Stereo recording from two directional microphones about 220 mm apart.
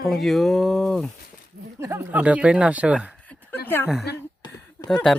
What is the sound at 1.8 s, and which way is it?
Speech, 10° right (ahead or behind).